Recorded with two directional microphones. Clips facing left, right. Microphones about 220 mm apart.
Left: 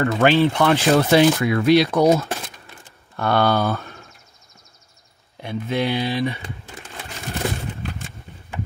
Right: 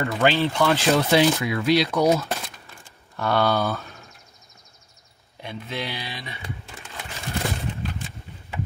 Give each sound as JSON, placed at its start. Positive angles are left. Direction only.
{"t": 0.0, "sound": "speech", "side_deg": 65}
{"t": 0.4, "sound": "speech", "side_deg": 45}
{"t": 3.2, "sound": "speech", "side_deg": 60}
{"t": 5.4, "sound": "speech", "side_deg": 50}